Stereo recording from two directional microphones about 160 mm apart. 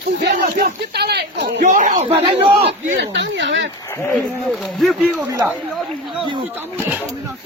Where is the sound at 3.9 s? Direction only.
15° left (ahead or behind).